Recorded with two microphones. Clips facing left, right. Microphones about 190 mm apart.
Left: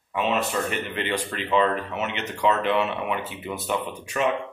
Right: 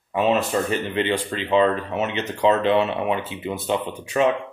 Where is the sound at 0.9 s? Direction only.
25° right (ahead or behind).